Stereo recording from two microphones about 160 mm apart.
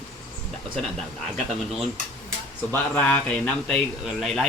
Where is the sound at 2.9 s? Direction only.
10° left (ahead or behind).